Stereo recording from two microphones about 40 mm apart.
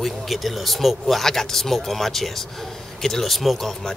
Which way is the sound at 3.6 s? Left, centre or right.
Centre.